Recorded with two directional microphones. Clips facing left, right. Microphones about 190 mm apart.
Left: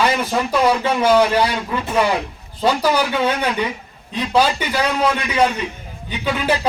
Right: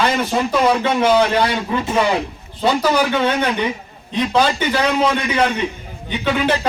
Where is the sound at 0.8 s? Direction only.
10° left (ahead or behind).